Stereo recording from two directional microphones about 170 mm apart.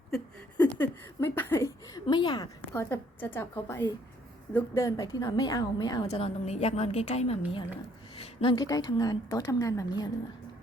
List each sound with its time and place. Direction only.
0.1 s a sound: 10° left (ahead or behind)
2.0 s a woman's voice: 25° left (ahead or behind)
2.9 s a woman's voice: 10° left (ahead or behind)
6.1 s a woman's voice: 40° left (ahead or behind); by 10.1 s 20° left (ahead or behind)